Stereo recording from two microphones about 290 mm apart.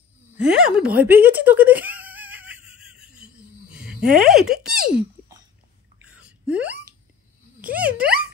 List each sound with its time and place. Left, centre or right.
0.4 s speech: centre
4.0 s speech: centre
6.0 s a sound: centre
7.7 s speech: right